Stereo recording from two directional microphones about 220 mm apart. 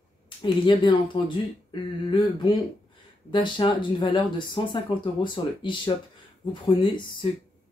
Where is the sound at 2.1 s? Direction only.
20° left (ahead or behind).